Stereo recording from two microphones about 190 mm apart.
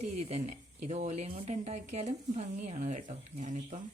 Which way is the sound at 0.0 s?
35° right (ahead or behind).